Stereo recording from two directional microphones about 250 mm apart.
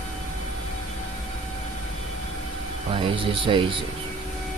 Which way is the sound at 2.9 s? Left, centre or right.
Centre.